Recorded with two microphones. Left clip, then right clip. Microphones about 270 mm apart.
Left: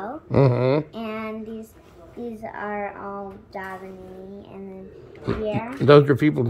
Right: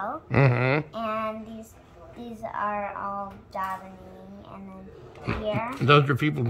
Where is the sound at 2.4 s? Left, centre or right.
Right.